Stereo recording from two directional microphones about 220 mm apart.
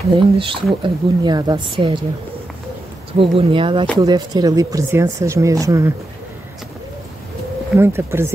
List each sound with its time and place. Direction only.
0.4 s speech: 25° right (ahead or behind)
3.2 s speech: 25° right (ahead or behind)
7.7 s speech: 10° right (ahead or behind)